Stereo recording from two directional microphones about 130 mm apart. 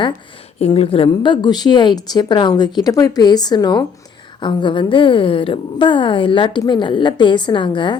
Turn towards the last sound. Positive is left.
turn(degrees=35)  # may be behind; listen again after turning